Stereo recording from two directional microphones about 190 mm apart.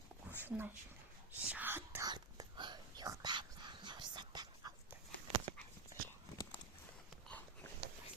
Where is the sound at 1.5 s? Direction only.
10° right (ahead or behind).